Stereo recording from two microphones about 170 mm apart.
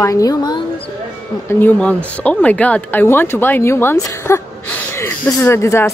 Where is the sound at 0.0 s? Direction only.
20° left (ahead or behind).